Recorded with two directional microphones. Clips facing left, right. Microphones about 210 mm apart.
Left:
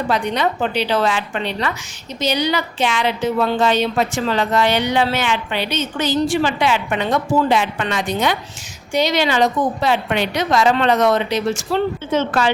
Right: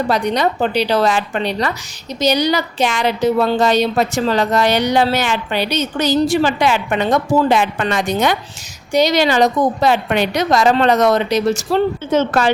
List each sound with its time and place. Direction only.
0.1 s a woman's voice: 40° right (ahead or behind)